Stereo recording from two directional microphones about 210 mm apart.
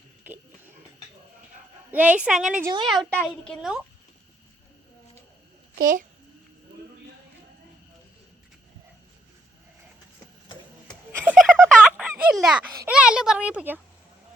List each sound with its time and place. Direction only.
1.9 s a child's voice: 5° right (ahead or behind)
5.7 s a child's voice: 40° right (ahead or behind)
10.8 s a sound: centre (ahead or behind)
11.6 s speech: 5° right (ahead or behind)